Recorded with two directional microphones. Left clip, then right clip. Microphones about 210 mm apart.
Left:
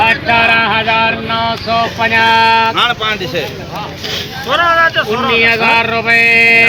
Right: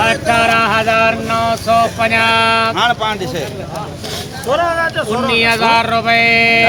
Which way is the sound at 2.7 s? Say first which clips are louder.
Left 1 dB; 55° right (ahead or behind).